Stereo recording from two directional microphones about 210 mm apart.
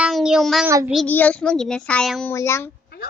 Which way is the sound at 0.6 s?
10° right (ahead or behind).